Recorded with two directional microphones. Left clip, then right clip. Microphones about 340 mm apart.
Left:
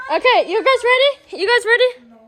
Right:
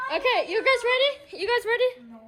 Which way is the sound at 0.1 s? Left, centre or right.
Left.